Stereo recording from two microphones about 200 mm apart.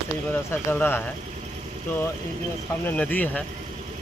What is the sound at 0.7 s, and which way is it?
Speech, 10° left (ahead or behind).